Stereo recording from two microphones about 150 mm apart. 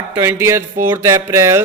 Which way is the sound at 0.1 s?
15° right (ahead or behind).